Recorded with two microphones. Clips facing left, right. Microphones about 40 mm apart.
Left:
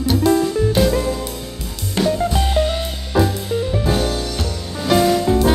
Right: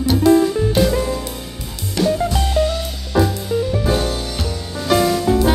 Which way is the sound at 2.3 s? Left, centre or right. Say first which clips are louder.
Even; left.